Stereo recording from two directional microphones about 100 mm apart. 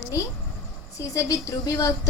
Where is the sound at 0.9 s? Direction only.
30° left (ahead or behind).